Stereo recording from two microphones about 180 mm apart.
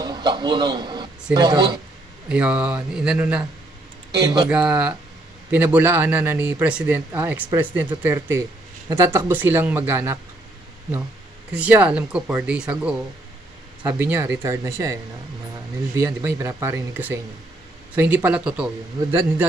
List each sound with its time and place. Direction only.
0.0 s speech: 25° right (ahead or behind)
2.2 s speech: 5° right (ahead or behind)
4.1 s a man's voice: 25° right (ahead or behind)
4.5 s speech: 5° right (ahead or behind)
11.5 s speech: 5° right (ahead or behind)
16.2 s speech: 15° right (ahead or behind)